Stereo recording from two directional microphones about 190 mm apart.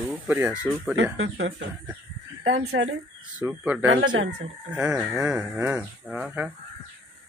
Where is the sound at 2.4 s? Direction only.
85° right.